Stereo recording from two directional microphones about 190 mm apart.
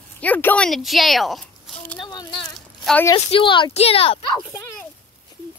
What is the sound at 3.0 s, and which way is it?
Speech, 25° left (ahead or behind).